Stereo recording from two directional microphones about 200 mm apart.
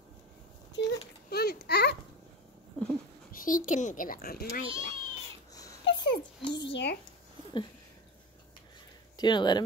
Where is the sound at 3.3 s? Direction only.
40° left (ahead or behind).